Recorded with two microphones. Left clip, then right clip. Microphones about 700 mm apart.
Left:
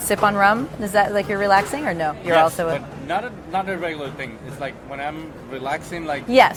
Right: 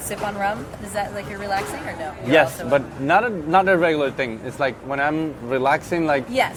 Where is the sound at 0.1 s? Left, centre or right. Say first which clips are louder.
Left 8 dB; left.